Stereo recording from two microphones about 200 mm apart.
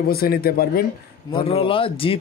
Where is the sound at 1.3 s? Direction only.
25° left (ahead or behind).